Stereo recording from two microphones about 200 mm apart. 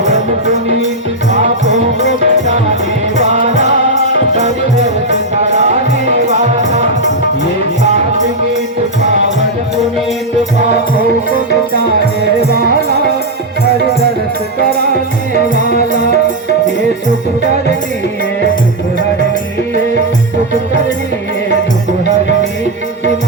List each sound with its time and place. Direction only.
2.0 s music: 35° right (ahead or behind)
4.4 s music: 35° right (ahead or behind)